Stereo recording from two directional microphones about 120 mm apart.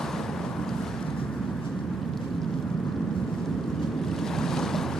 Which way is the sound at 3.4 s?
5° left (ahead or behind).